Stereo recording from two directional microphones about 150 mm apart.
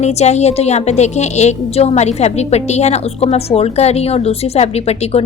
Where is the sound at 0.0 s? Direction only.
45° left (ahead or behind).